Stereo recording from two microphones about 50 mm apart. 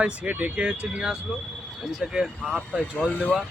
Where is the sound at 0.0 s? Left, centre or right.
Right.